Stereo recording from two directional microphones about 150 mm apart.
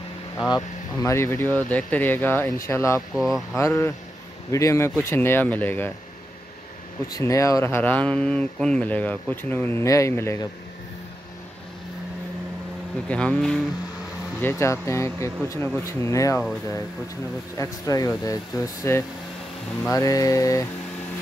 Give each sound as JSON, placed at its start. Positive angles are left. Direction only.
{"t": 0.5, "sound": "speech", "side_deg": 20}
{"t": 3.2, "sound": "speech", "side_deg": 0}
{"t": 3.5, "sound": "speech", "side_deg": 20}
{"t": 7.1, "sound": "speech", "side_deg": 20}
{"t": 13.1, "sound": "speech", "side_deg": 5}
{"t": 14.4, "sound": "speech", "side_deg": 15}
{"t": 17.6, "sound": "speech", "side_deg": 20}